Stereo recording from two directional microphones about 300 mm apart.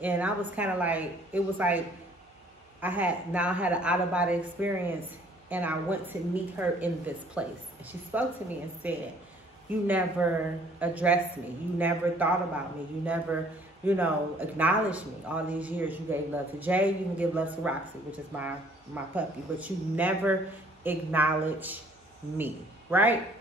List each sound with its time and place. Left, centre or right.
0.0 s speech: centre
2.8 s a man's voice: centre